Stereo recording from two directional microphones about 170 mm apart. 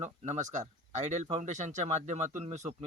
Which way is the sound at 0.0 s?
45° right (ahead or behind).